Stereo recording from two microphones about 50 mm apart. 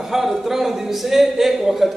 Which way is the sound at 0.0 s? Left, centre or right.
Centre.